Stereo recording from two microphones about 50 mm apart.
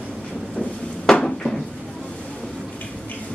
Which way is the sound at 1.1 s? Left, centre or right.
Centre.